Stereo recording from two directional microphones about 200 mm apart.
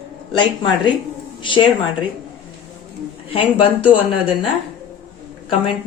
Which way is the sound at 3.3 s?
25° left (ahead or behind).